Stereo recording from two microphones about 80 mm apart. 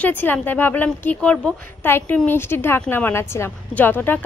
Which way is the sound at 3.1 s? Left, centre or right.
Left.